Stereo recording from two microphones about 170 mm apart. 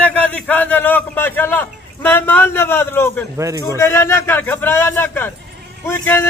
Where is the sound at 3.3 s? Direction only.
20° right (ahead or behind).